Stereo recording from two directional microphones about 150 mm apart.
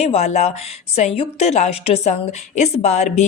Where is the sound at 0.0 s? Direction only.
50° left (ahead or behind).